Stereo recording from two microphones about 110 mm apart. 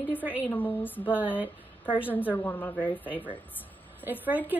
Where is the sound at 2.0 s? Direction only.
15° left (ahead or behind).